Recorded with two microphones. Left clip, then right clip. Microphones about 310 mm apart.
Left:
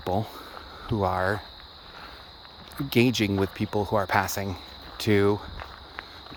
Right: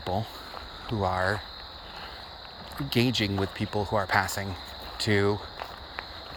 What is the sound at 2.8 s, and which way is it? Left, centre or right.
Speech, left.